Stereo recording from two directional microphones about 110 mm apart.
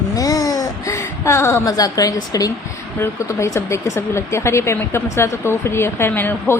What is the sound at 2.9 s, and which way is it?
Speech, 25° left (ahead or behind).